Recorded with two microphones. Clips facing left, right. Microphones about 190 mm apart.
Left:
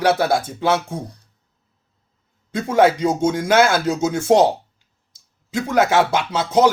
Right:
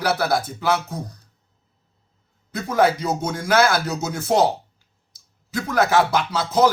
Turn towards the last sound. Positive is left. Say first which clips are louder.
# left 2 dB
turn(degrees=20)  # may be behind; listen again after turning